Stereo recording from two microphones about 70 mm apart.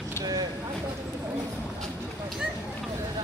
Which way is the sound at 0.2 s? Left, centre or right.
Right.